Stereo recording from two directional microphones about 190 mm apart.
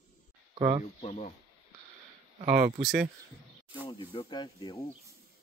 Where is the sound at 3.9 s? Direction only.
25° left (ahead or behind).